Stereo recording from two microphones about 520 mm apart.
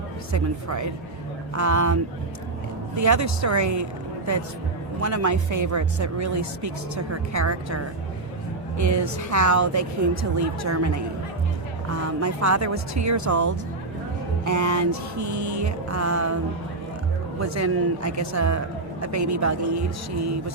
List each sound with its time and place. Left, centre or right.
0.3 s speech: right
4.9 s speech: right
12.2 s speech: right
17.4 s speech: right